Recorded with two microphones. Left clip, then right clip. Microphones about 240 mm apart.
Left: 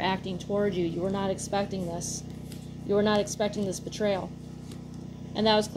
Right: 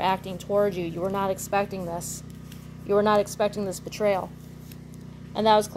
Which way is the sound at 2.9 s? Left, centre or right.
Right.